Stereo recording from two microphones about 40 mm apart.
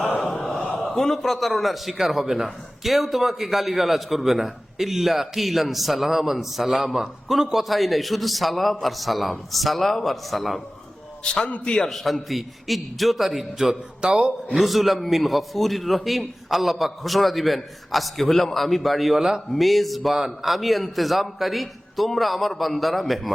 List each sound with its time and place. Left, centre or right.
0.9 s a man's voice: centre
11.2 s a man's voice: left
11.9 s a man's voice: centre
14.0 s a man's voice: right
14.6 s a man's voice: centre